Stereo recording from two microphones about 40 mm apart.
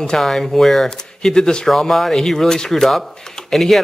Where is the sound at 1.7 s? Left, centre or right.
Centre.